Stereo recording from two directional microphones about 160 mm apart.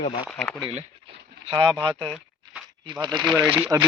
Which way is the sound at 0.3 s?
5° left (ahead or behind).